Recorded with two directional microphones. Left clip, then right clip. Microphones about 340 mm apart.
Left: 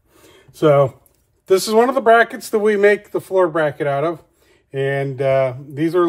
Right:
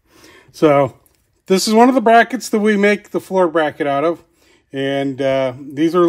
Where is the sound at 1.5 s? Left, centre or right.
Right.